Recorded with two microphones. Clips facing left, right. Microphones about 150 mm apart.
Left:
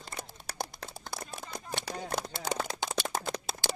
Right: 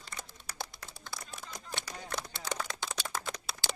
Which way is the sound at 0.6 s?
45° left (ahead or behind).